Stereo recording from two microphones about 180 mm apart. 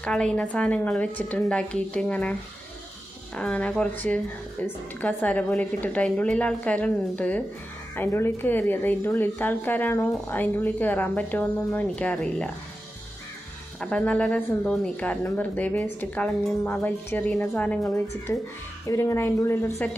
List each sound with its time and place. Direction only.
0.0 s a woman's voice: 5° left (ahead or behind)
3.3 s speech: 5° left (ahead or behind)
13.7 s speech: 5° left (ahead or behind)
18.9 s speech: 15° left (ahead or behind)